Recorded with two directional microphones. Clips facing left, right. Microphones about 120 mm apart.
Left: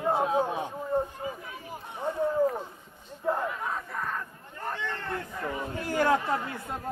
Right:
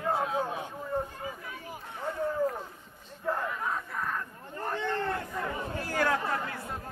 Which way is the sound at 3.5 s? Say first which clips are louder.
Even; centre (ahead or behind).